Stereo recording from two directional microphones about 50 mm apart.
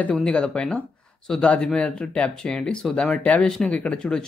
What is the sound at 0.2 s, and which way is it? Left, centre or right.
Speech, centre.